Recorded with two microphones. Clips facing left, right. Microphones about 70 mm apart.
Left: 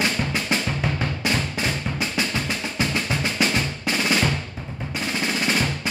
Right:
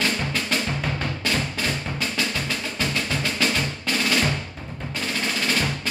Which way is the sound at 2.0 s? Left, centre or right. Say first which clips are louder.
Left 1 dB; left.